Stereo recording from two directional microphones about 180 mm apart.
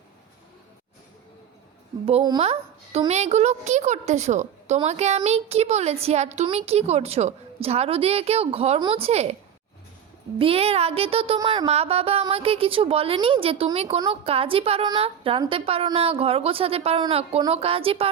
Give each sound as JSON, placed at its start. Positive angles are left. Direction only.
{"t": 2.4, "sound": "a woman's voice", "side_deg": -35}
{"t": 10.3, "sound": "a woman's voice", "side_deg": -30}